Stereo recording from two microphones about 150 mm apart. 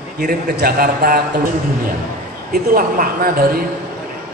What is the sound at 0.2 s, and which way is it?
A man's voice, 75° right (ahead or behind).